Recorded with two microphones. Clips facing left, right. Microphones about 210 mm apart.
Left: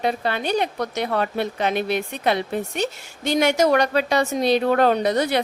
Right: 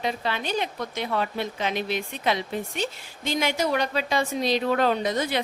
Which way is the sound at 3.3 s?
75° left (ahead or behind).